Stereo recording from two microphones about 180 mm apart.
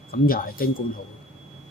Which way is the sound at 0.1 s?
55° left (ahead or behind).